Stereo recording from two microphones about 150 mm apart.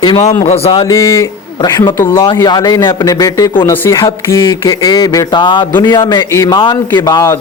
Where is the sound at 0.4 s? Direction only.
40° left (ahead or behind).